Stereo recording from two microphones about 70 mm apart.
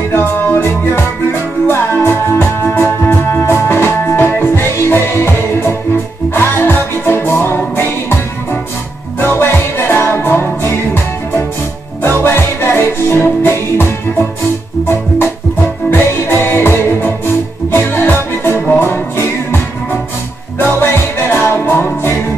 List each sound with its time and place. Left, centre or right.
0.1 s music: left
9.2 s music: left
12.2 s music: left
14.9 s music: left